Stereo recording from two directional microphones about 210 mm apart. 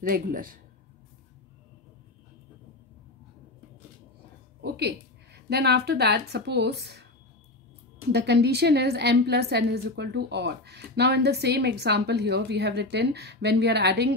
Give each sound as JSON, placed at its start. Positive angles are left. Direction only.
{"t": 0.0, "sound": "speech", "side_deg": -40}
{"t": 4.6, "sound": "a woman's voice", "side_deg": -50}
{"t": 8.1, "sound": "a woman's voice", "side_deg": -50}